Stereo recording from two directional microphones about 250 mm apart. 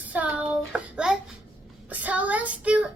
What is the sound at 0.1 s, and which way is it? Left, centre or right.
Child singing, centre.